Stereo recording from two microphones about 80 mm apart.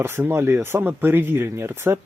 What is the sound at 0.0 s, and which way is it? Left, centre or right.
Speech, right.